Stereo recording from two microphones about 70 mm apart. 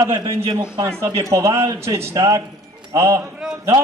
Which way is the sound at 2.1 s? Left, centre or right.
Right.